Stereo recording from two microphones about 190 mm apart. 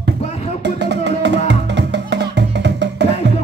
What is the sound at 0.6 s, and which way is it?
Music, 65° right (ahead or behind).